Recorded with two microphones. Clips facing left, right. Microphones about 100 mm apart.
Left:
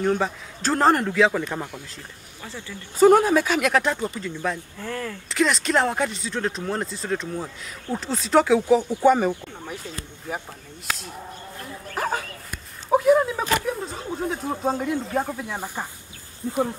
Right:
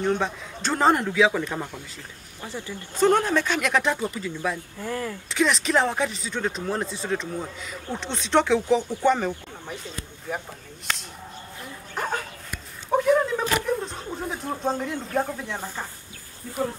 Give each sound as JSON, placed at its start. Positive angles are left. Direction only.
{"t": 0.0, "sound": "speech", "side_deg": 0}
{"t": 3.0, "sound": "speech", "side_deg": 5}
{"t": 4.8, "sound": "speech", "side_deg": -20}
{"t": 5.3, "sound": "speech", "side_deg": 0}
{"t": 11.9, "sound": "dog", "side_deg": 5}
{"t": 12.9, "sound": "speech", "side_deg": 5}
{"t": 16.4, "sound": "speech", "side_deg": 25}